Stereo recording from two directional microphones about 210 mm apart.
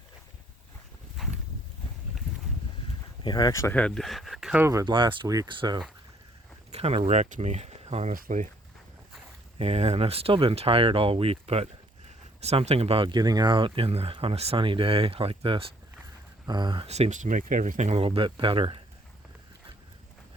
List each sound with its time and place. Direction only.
1.2 s a sound: centre (ahead or behind)
3.2 s speech: 20° left (ahead or behind); by 8.4 s 35° right (ahead or behind)
9.6 s speech: 30° right (ahead or behind)